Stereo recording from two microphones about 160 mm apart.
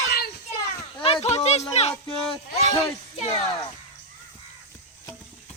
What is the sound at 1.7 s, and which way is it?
Speech, 40° left (ahead or behind).